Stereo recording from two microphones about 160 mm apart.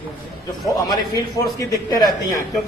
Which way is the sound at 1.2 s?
20° left (ahead or behind).